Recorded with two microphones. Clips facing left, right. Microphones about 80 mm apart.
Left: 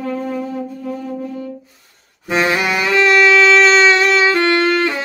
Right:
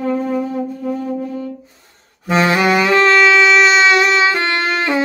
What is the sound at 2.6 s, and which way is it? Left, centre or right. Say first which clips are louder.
Music: right 4 dB; right.